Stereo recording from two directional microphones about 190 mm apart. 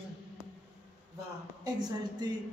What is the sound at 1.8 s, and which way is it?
Speech, 20° right (ahead or behind).